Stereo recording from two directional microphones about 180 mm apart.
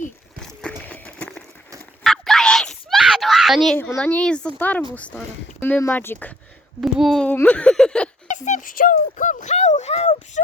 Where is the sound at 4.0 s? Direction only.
5° left (ahead or behind).